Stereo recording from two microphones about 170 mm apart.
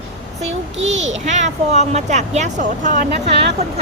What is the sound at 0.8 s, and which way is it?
A child's voice, 45° right (ahead or behind).